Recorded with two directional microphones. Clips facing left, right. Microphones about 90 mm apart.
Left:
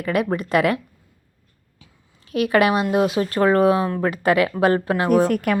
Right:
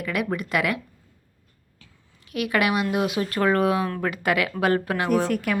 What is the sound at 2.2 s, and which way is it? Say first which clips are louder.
A woman's voice: left 6 dB; 35° left (ahead or behind).